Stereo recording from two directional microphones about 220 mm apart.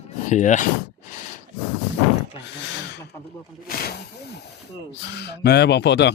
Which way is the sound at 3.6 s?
45° left (ahead or behind).